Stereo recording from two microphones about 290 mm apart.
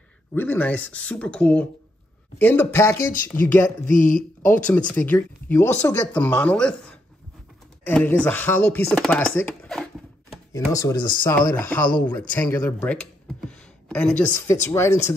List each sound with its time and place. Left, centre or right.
0.3 s speech: centre
3.9 s speech: left
4.5 s speech: centre
7.8 s speech: centre